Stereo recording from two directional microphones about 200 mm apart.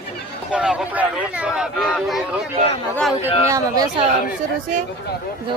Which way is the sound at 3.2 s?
15° right (ahead or behind).